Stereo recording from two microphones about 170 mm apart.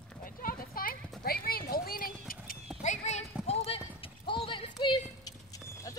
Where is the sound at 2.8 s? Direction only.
40° left (ahead or behind); by 5.9 s 20° left (ahead or behind).